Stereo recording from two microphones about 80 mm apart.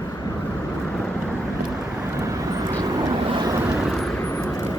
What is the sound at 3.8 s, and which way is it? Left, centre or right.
Vehicle, centre.